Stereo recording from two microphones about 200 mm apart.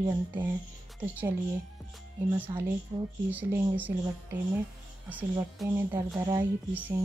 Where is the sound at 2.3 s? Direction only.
10° right (ahead or behind).